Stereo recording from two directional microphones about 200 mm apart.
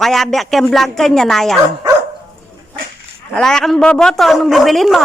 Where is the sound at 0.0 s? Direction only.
Centre (ahead or behind).